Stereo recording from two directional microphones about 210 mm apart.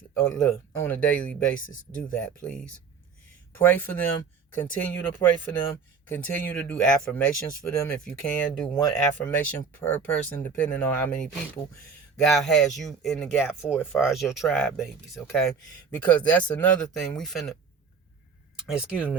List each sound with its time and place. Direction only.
0.1 s speech: 5° left (ahead or behind)
1.5 s speech: 40° left (ahead or behind)
2.2 s speech: 5° left (ahead or behind)
18.7 s speech: 5° right (ahead or behind)